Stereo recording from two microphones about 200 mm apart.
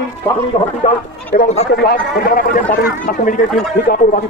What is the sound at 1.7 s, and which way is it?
Speech, 50° left (ahead or behind).